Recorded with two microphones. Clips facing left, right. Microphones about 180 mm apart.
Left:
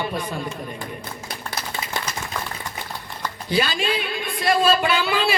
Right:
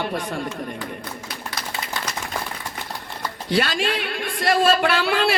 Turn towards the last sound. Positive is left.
turn(degrees=-70)  # may be behind; listen again after turning